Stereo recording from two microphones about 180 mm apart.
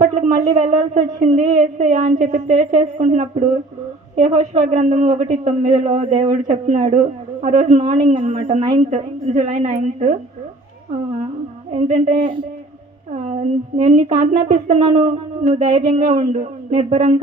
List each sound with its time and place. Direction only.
0.0 s speech: 40° right (ahead or behind)
11.7 s speech: 40° right (ahead or behind)
12.2 s speech: 25° right (ahead or behind)
13.1 s speech: 35° right (ahead or behind)